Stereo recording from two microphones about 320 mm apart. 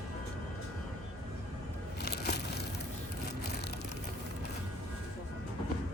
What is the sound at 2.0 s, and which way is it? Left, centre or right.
Crushing, left.